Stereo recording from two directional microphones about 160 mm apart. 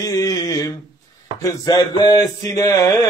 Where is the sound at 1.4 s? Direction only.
20° left (ahead or behind).